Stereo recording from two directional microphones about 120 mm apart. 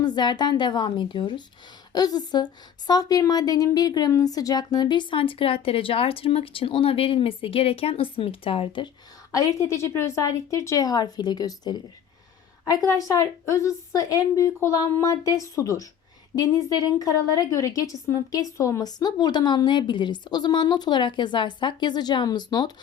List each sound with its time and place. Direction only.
0.0 s a woman's voice: 35° left (ahead or behind)
9.3 s a woman's voice: 30° left (ahead or behind)